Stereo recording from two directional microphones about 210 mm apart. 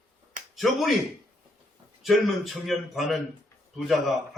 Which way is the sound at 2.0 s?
Centre (ahead or behind).